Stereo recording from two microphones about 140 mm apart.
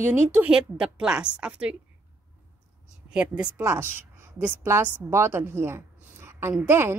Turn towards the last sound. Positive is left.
turn(degrees=-20)  # may be behind; listen again after turning